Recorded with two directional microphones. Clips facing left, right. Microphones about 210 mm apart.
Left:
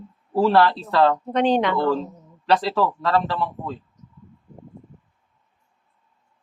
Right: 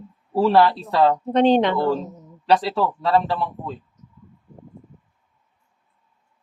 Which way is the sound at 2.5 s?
10° right (ahead or behind).